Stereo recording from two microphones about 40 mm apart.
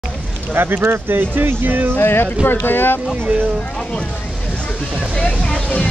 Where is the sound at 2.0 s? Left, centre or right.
Left.